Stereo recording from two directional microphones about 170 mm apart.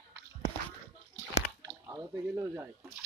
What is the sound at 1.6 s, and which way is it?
Speech, 15° right (ahead or behind).